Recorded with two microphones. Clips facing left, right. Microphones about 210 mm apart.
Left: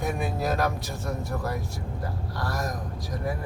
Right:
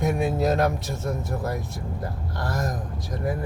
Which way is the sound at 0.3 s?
25° right (ahead or behind).